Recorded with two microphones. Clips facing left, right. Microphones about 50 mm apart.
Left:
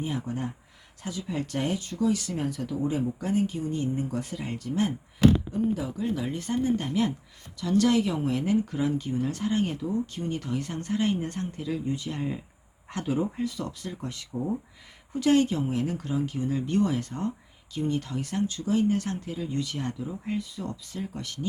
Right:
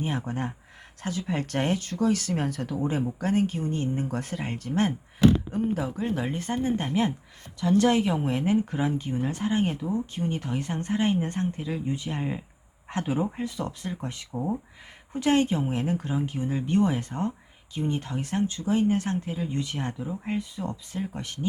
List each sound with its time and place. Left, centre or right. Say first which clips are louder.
0.0 s speech: right 1 dB; right